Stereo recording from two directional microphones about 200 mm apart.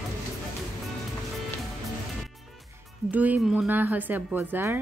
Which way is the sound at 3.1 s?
10° right (ahead or behind).